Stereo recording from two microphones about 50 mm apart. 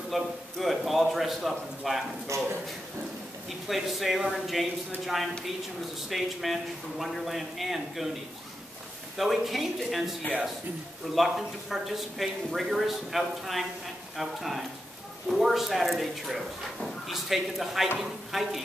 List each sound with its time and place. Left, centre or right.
0.1 s speech: centre
2.3 s speech: right
3.4 s speech: centre
9.1 s speech: centre
11.1 s speech: centre